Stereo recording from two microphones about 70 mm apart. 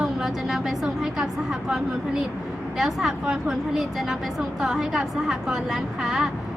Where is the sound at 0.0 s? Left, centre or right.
Centre.